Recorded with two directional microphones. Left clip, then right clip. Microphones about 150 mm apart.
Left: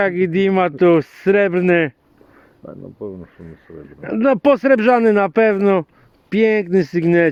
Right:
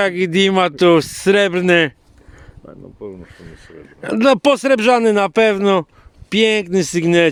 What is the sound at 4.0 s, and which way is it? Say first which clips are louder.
Speech: right 3 dB; 35° right (ahead or behind).